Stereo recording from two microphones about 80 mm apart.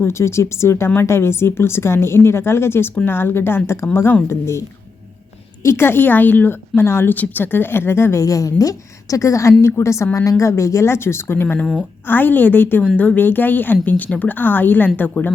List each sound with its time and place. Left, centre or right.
0.0 s a woman's voice: left
5.6 s a woman's voice: left
11.6 s a woman's voice: centre
12.0 s a woman's voice: left